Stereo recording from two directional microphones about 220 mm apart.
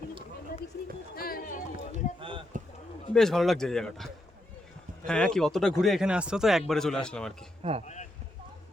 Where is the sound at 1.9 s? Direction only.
25° right (ahead or behind).